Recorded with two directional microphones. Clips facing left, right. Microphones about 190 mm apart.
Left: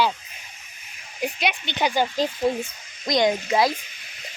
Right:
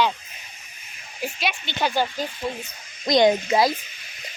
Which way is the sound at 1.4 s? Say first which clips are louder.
Even; 20° left (ahead or behind).